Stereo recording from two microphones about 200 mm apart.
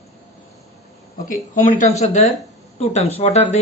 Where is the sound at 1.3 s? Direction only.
40° left (ahead or behind).